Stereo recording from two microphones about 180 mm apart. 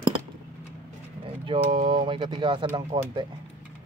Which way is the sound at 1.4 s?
30° right (ahead or behind).